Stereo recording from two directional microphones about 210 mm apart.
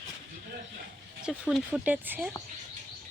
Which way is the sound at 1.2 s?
5° right (ahead or behind).